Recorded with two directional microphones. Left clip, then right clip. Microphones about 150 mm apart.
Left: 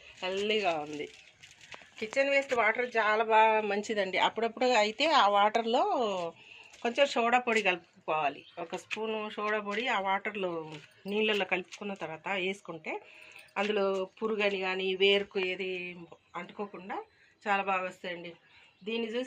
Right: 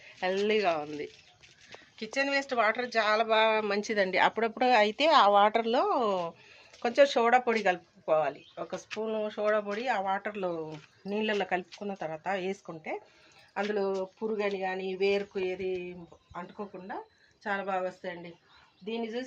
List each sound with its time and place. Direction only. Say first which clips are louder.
0.2 s speech: right 3 dB; 45° right (ahead or behind)
0.5 s speech: even; 25° right (ahead or behind)
2.0 s speech: left 2 dB; 15° left (ahead or behind)
3.7 s speech: right 1 dB; 10° right (ahead or behind)
3.9 s speech: right 4 dB; 30° right (ahead or behind)
6.8 s speech: right 4 dB; 70° right (ahead or behind); by 13.0 s 40° right (ahead or behind)
13.5 s speech: left 1 dB; 20° right (ahead or behind)
14.0 s speech: left 1 dB; 5° right (ahead or behind)
18.9 s speech: left 1 dB; 10° right (ahead or behind)